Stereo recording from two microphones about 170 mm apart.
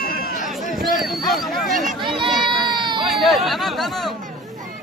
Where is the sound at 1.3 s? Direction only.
Centre (ahead or behind).